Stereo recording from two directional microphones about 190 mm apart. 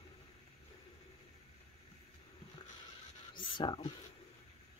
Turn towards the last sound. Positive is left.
turn(degrees=25)  # may be behind; listen again after turning